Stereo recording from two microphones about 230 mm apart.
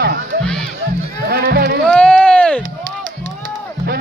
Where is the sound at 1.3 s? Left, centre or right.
Right.